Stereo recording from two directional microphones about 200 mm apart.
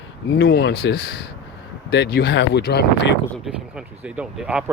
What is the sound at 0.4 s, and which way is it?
Speech, 50° left (ahead or behind).